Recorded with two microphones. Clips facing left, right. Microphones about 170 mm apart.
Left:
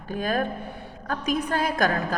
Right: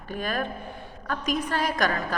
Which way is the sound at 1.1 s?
45° left (ahead or behind).